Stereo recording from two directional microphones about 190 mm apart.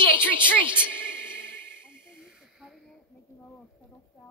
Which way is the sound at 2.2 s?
Centre (ahead or behind).